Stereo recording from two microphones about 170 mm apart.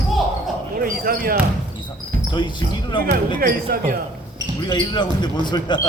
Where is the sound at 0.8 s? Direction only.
60° right (ahead or behind).